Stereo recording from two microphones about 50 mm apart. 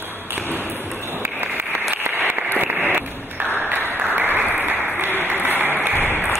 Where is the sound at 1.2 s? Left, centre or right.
Right.